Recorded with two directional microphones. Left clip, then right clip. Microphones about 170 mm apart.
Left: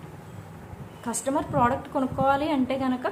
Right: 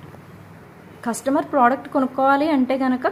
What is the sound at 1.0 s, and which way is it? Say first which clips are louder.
A woman's voice: right 6 dB; 35° right (ahead or behind).